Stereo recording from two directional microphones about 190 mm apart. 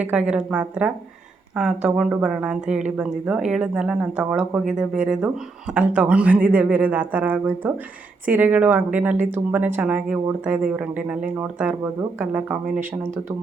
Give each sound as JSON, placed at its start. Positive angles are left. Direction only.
{"t": 0.0, "sound": "a woman's voice", "side_deg": -5}